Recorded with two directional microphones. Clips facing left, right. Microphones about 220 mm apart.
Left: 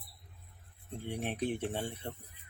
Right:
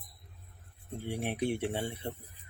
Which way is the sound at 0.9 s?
10° right (ahead or behind).